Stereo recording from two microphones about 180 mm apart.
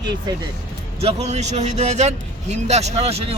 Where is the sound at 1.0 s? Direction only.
40° right (ahead or behind).